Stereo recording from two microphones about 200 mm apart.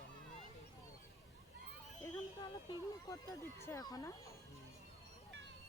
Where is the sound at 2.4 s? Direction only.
20° left (ahead or behind).